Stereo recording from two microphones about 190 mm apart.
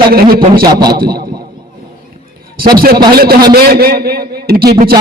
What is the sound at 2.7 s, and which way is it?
A man's voice, 50° right (ahead or behind).